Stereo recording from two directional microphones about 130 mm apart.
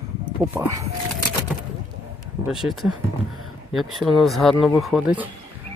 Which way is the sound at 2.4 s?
5° right (ahead or behind).